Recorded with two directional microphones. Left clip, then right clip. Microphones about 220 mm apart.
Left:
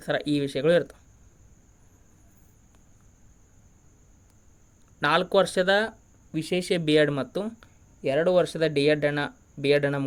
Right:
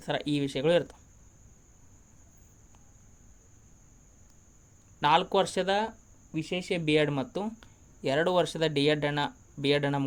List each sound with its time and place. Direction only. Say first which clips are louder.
0.0 s speech: left 4 dB; 15° left (ahead or behind)
4.9 s speech: left 2 dB; 15° left (ahead or behind)